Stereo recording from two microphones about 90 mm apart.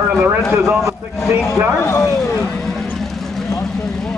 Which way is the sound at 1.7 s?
35° left (ahead or behind).